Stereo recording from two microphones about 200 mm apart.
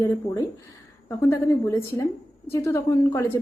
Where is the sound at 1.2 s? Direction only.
15° left (ahead or behind).